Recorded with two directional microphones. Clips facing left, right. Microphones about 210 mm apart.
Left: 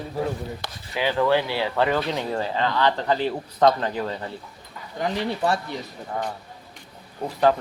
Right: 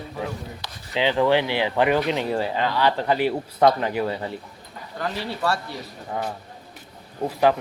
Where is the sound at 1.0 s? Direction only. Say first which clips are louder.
Right 2 dB; 20° right (ahead or behind).